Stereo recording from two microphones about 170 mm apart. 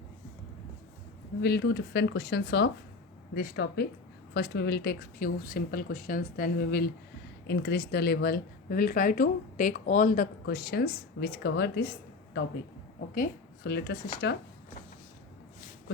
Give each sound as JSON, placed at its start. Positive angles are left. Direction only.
{"t": 1.4, "sound": "speech", "side_deg": 70}
{"t": 3.3, "sound": "speech", "side_deg": 70}
{"t": 7.4, "sound": "speech", "side_deg": 85}
{"t": 10.4, "sound": "speech", "side_deg": 70}
{"t": 13.7, "sound": "speech", "side_deg": 70}
{"t": 14.2, "sound": "speech", "side_deg": 80}